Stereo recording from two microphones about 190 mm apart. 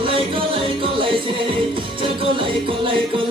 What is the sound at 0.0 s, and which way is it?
Music, 30° right (ahead or behind).